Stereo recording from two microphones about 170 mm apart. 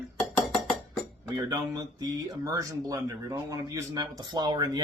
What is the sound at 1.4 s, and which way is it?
Speech, 20° right (ahead or behind).